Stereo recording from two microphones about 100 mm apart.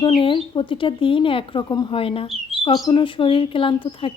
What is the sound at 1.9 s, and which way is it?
Speech, 65° left (ahead or behind).